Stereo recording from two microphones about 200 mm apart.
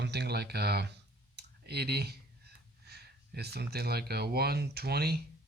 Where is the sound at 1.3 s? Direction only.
55° right (ahead or behind).